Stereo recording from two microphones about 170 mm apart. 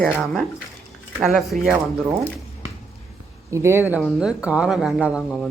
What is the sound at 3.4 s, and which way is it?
Speech, 15° right (ahead or behind).